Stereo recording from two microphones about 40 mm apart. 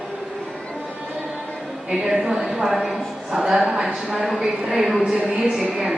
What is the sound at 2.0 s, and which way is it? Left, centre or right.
A woman's voice, centre.